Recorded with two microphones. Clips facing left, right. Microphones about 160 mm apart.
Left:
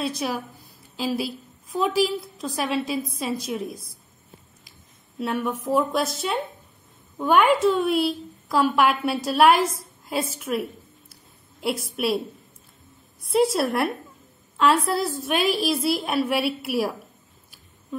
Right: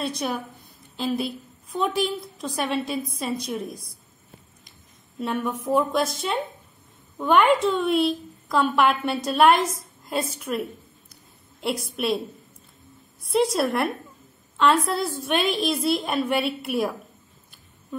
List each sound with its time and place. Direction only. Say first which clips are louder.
0.0 s a woman's voice: left 1 dB; centre (ahead or behind)
5.2 s a woman's voice: left 1 dB; 5° left (ahead or behind)
13.2 s a woman's voice: left 1 dB; centre (ahead or behind)